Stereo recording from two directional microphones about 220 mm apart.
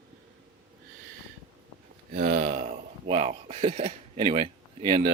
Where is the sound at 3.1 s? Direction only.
30° right (ahead or behind).